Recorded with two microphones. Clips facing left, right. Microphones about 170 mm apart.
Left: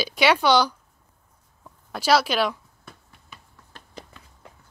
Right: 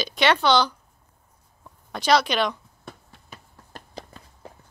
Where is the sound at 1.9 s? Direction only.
5° left (ahead or behind).